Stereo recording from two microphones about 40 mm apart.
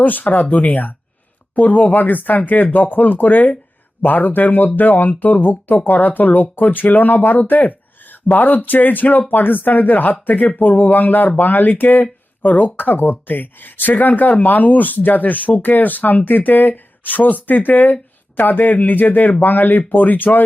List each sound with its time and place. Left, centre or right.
0.0 s speech: left